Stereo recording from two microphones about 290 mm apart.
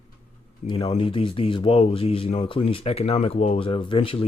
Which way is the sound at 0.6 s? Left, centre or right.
Centre.